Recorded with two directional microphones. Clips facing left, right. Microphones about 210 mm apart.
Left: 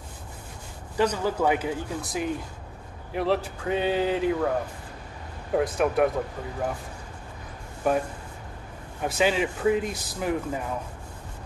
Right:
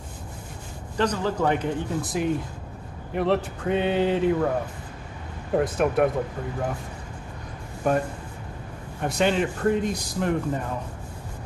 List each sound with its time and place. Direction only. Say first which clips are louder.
0.9 s speech: even; 10° left (ahead or behind)
5.5 s speech: right 1 dB; centre (ahead or behind)
7.8 s speech: right 1 dB; 5° left (ahead or behind)
9.0 s speech: right 1 dB; 5° left (ahead or behind)